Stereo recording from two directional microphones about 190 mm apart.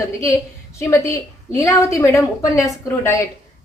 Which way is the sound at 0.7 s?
15° left (ahead or behind).